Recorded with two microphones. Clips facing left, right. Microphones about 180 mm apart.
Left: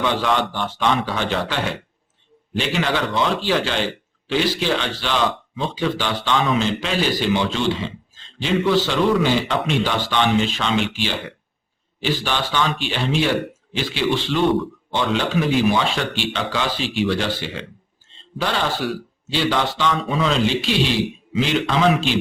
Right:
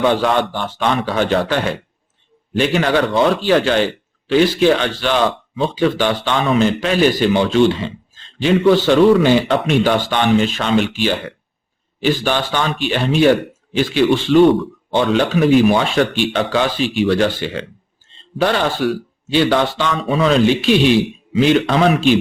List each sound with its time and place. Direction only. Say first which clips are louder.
0.0 s speech: right 5 dB; 50° right (ahead or behind)